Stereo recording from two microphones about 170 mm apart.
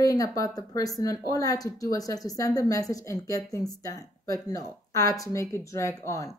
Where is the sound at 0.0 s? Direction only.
20° left (ahead or behind).